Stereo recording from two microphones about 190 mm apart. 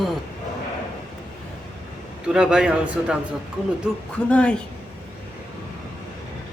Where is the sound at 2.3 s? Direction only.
5° right (ahead or behind).